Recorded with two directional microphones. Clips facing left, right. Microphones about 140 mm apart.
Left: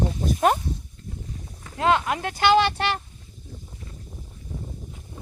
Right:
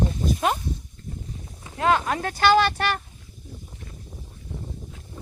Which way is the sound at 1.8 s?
20° left (ahead or behind).